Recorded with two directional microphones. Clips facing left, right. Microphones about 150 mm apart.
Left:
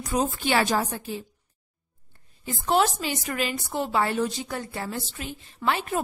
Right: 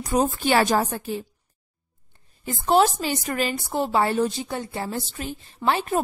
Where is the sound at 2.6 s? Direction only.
35° right (ahead or behind).